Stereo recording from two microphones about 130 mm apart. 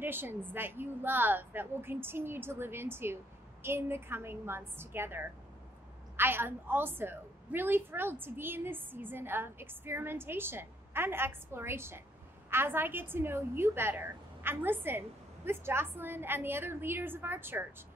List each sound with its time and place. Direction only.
0.0 s a woman's voice: 15° right (ahead or behind)